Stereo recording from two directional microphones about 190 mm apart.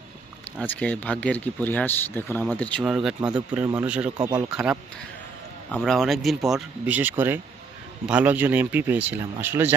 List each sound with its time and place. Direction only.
0.6 s speech: 10° left (ahead or behind)
4.2 s speech: 20° right (ahead or behind)
4.5 s speech: 5° right (ahead or behind)